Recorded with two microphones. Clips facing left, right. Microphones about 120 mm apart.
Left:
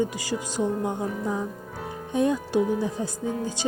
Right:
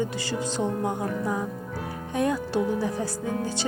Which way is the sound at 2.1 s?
20° left (ahead or behind).